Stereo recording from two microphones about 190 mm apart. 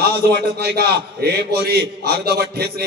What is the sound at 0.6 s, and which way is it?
A man's voice, 55° right (ahead or behind).